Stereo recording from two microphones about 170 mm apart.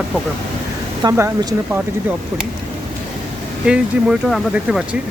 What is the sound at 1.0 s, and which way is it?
Speech, 20° right (ahead or behind).